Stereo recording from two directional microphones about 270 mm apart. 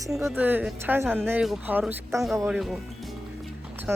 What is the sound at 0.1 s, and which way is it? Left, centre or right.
A woman's voice, centre.